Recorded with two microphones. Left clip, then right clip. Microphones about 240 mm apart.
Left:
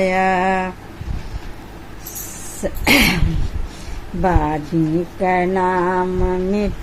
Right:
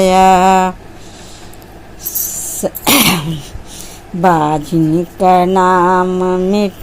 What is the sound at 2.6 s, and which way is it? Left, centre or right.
Cough, right.